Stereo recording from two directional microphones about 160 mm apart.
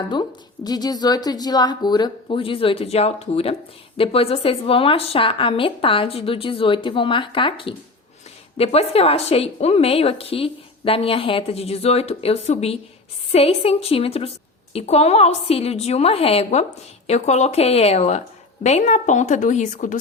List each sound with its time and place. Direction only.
0.1 s a woman's voice: 25° left (ahead or behind); by 20.0 s 55° left (ahead or behind)